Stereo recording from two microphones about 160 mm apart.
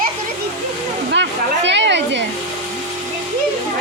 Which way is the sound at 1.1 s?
90° right.